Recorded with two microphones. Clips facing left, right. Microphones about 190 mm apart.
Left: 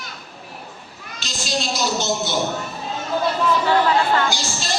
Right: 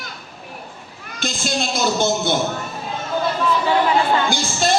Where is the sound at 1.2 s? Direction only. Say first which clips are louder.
Right 3 dB; 55° right (ahead or behind).